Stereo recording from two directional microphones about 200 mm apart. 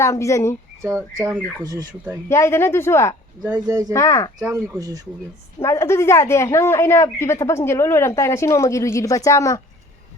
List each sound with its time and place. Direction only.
0.0 s a woman's voice: 15° left (ahead or behind)
0.8 s speech: 15° right (ahead or behind)
2.3 s a woman's voice: 15° left (ahead or behind)
3.4 s speech: 5° right (ahead or behind)
3.9 s a woman's voice: 15° left (ahead or behind)
4.4 s speech: 10° right (ahead or behind)
5.5 s a woman's voice: 15° left (ahead or behind)